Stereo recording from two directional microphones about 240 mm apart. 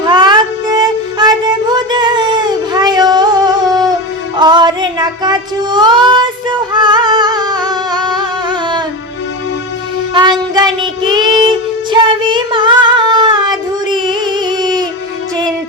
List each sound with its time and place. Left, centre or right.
0.0 s child singing: centre
10.2 s child singing: centre
13.9 s music: centre